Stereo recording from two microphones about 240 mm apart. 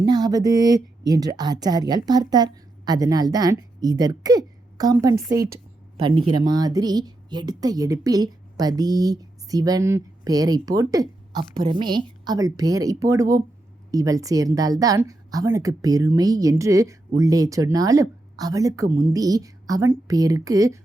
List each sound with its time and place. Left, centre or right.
0.0 s speech: centre